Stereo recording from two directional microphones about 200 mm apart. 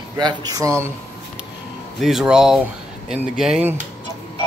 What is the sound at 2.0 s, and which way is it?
Speech, centre (ahead or behind).